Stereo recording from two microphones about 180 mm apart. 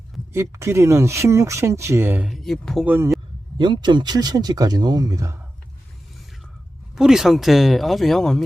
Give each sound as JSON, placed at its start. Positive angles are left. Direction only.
{"t": 0.3, "sound": "speech", "side_deg": -15}
{"t": 2.8, "sound": "speech", "side_deg": -10}
{"t": 3.6, "sound": "speech", "side_deg": -25}
{"t": 6.9, "sound": "speech", "side_deg": -5}